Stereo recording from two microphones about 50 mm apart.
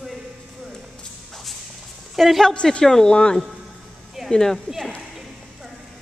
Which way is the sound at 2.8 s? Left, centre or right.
Centre.